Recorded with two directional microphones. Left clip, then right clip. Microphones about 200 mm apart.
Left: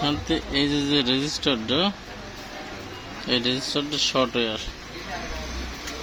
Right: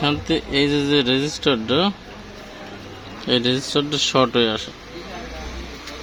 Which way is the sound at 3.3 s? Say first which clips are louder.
Right 4 dB; 25° right (ahead or behind).